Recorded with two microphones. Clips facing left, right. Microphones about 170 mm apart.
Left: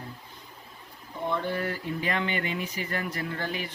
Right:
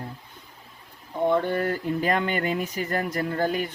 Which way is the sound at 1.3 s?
50° right (ahead or behind).